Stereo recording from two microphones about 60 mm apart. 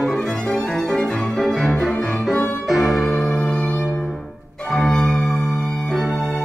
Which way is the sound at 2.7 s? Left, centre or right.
Centre.